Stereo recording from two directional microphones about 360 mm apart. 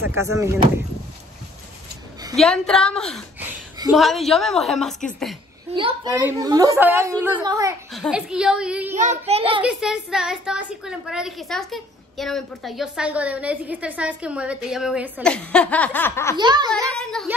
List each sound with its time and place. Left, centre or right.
0.0 s a woman's voice: centre
2.3 s a woman's voice: centre
3.7 s a sound: centre
4.0 s a woman's voice: centre
5.7 s a woman's voice: centre
8.9 s a woman's voice: centre
9.6 s a woman's voice: centre
16.3 s a woman's voice: centre
16.9 s a sound: centre